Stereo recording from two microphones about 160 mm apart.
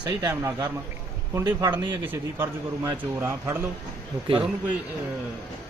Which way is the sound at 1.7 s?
10° right (ahead or behind).